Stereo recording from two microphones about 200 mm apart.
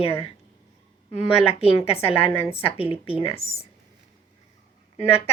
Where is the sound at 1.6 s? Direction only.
30° left (ahead or behind).